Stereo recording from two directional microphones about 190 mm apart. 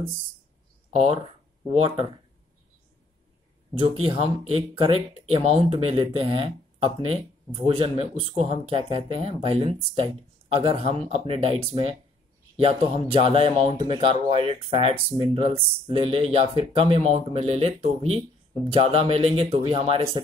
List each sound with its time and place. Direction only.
0.9 s speech: 30° right (ahead or behind)
4.1 s speech: 30° right (ahead or behind)